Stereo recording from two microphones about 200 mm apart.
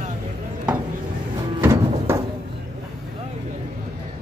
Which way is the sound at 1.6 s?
15° right (ahead or behind).